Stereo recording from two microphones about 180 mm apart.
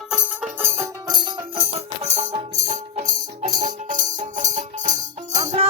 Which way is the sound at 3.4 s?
45° right (ahead or behind).